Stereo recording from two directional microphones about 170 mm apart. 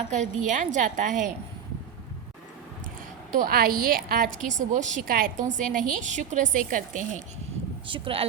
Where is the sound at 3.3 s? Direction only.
60° right (ahead or behind).